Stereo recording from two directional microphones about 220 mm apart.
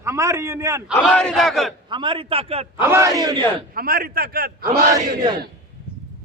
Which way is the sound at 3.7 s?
40° right (ahead or behind).